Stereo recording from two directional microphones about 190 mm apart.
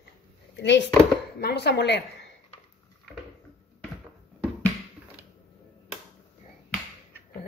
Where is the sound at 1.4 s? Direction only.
60° left (ahead or behind).